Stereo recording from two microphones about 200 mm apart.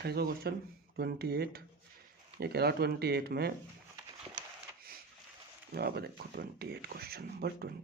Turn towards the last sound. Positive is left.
turn(degrees=-50)  # may be behind; listen again after turning